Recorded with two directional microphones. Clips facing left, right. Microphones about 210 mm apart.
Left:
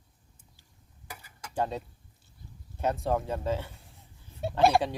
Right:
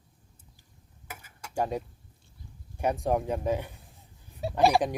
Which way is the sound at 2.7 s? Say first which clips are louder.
Right 2 dB; 15° right (ahead or behind).